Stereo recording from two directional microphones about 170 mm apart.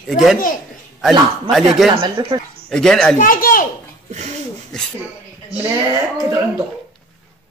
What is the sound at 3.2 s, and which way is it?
Speech, 55° left (ahead or behind).